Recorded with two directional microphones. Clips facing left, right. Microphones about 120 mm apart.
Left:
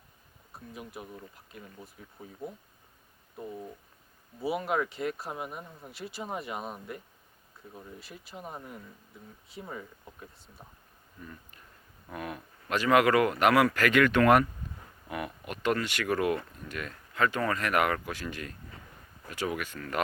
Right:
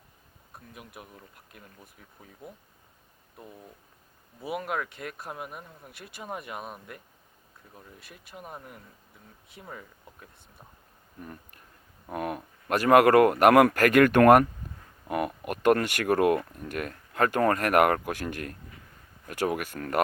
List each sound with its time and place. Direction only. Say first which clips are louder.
0.7 s speech: left 5 dB; centre (ahead or behind)
3.4 s speech: left 7 dB; centre (ahead or behind)
5.9 s speech: left 8 dB; 55° right (ahead or behind)
6.2 s speech: even; centre (ahead or behind)
11.2 s speech: right 4 dB; 55° right (ahead or behind)